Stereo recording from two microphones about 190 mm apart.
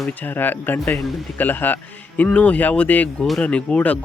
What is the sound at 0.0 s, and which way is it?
Speech, 10° left (ahead or behind).